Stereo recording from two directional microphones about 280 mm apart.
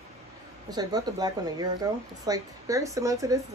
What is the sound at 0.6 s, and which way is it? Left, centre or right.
A woman's voice, centre.